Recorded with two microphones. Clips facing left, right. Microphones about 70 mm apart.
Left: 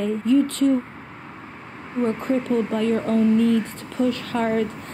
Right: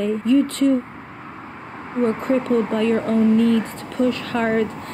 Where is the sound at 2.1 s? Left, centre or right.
Right.